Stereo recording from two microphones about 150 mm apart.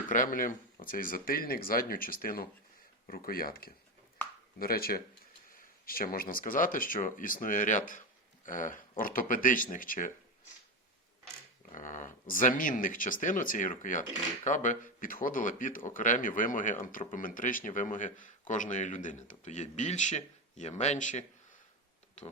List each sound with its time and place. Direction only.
0.1 s speech: 65° left (ahead or behind); by 5.0 s 90° left
5.5 s speech: 75° left (ahead or behind)
11.7 s speech: 60° left (ahead or behind)